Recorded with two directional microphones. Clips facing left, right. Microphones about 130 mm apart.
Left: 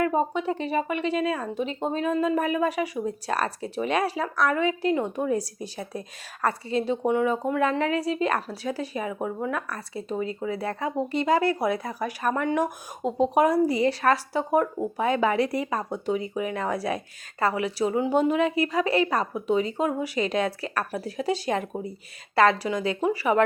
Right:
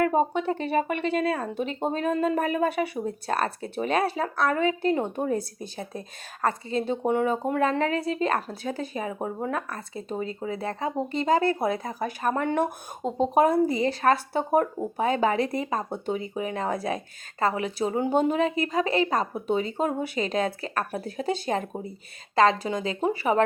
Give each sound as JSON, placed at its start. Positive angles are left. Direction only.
{"t": 0.0, "sound": "a sound", "side_deg": -40}
{"t": 0.5, "sound": "speech", "side_deg": -45}
{"t": 5.5, "sound": "speech", "side_deg": -25}
{"t": 6.7, "sound": "speech", "side_deg": -40}
{"t": 13.0, "sound": "speech", "side_deg": 5}
{"t": 13.3, "sound": "speech", "side_deg": -35}
{"t": 21.0, "sound": "speech", "side_deg": -40}
{"t": 22.7, "sound": "speech", "side_deg": -35}